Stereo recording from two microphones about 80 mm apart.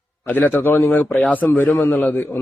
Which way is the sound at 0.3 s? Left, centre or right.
Left.